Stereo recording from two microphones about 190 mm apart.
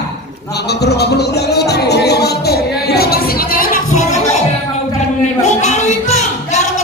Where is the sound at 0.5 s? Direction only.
60° left (ahead or behind); by 4.4 s 40° left (ahead or behind).